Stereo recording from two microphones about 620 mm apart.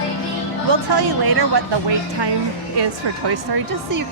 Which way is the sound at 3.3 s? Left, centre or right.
Right.